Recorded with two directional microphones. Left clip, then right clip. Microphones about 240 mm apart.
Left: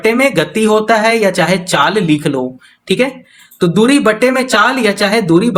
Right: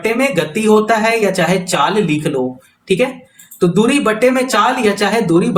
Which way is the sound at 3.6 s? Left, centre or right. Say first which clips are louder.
Left 3 dB; left.